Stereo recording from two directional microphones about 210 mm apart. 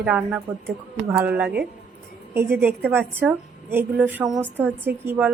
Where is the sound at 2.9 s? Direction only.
10° right (ahead or behind).